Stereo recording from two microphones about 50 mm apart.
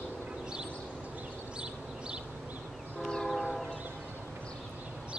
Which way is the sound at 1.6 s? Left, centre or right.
Centre.